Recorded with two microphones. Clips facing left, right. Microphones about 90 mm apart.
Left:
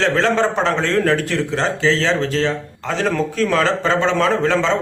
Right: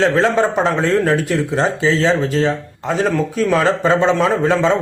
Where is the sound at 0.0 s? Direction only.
10° right (ahead or behind).